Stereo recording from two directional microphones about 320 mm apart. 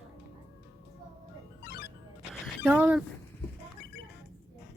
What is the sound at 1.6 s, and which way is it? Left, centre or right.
Music, left.